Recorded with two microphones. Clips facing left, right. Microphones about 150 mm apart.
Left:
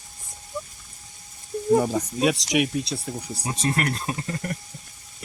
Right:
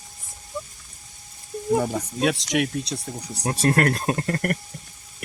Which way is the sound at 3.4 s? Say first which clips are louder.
Right 6 dB; 60° right (ahead or behind).